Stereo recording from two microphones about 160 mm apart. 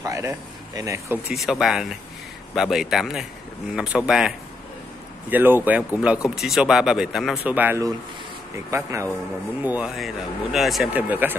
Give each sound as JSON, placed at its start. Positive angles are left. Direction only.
{"t": 0.0, "sound": "speech", "side_deg": -20}
{"t": 1.3, "sound": "speech", "side_deg": 0}
{"t": 5.3, "sound": "speech", "side_deg": -10}